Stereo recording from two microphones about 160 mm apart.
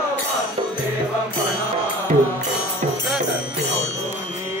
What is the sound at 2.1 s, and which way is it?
Music, 50° right (ahead or behind).